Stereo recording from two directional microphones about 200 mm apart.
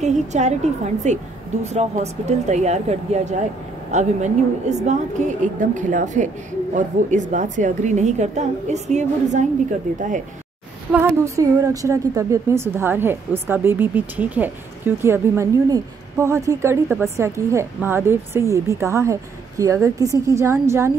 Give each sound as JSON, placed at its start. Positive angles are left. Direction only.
{"t": 0.0, "sound": "a woman's voice", "side_deg": -35}
{"t": 10.9, "sound": "a woman's voice", "side_deg": -10}